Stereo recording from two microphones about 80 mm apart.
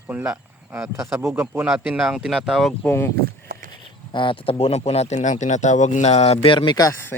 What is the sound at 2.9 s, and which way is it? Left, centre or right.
Speech, left.